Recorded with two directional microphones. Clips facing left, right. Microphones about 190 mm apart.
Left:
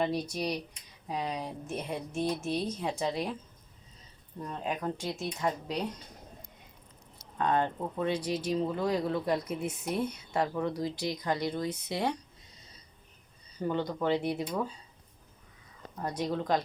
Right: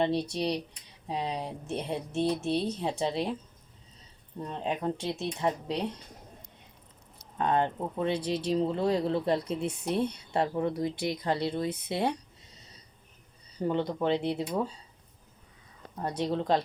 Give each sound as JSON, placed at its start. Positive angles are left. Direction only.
{"t": 0.3, "sound": "speech", "side_deg": -25}
{"t": 4.4, "sound": "speech", "side_deg": -25}
{"t": 7.3, "sound": "speech", "side_deg": -20}
{"t": 13.6, "sound": "speech", "side_deg": -25}
{"t": 16.0, "sound": "speech", "side_deg": -25}